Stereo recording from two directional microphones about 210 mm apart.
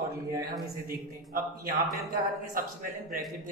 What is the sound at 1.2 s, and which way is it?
Speech, 15° right (ahead or behind).